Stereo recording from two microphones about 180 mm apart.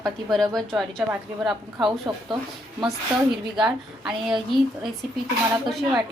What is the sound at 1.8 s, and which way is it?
Speech, 25° right (ahead or behind).